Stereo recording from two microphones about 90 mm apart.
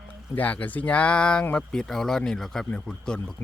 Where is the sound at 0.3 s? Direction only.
20° left (ahead or behind).